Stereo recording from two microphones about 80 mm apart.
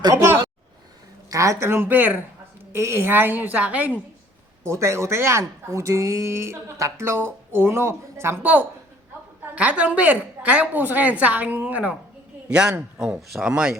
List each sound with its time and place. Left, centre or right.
0.1 s a woman's voice: right
1.3 s a woman's voice: right
4.6 s speech: right
9.6 s a woman's voice: centre